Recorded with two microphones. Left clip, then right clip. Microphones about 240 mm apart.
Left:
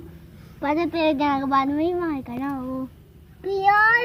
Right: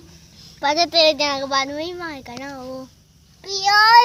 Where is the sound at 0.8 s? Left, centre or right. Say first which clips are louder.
Right 7 dB; right.